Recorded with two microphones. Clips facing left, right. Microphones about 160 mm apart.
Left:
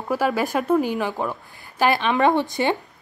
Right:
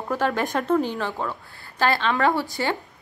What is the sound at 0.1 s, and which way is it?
A woman's voice, 10° left (ahead or behind).